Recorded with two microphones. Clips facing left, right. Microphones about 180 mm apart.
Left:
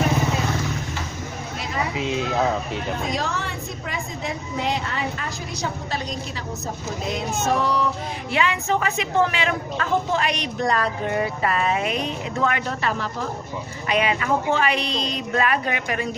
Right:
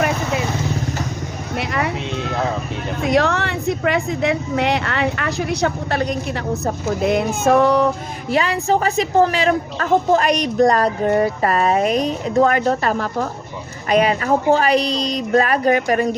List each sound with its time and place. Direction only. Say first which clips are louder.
1.5 s vehicle: right 6 dB; 70° right (ahead or behind)
2.0 s a sound: even; 5° left (ahead or behind)
3.0 s a woman's voice: right 9 dB; 70° right (ahead or behind)
8.3 s a woman's voice: right 5 dB; 35° right (ahead or behind)